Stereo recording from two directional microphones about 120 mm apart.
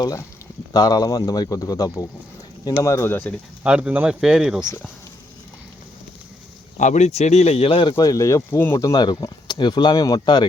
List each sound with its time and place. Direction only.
0.0 s speech: 25° left (ahead or behind)
3.6 s speech: 10° right (ahead or behind)
6.7 s speech: 85° left; by 10.4 s 35° left (ahead or behind)